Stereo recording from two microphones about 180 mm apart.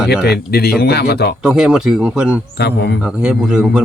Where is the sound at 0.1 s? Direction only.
65° left (ahead or behind).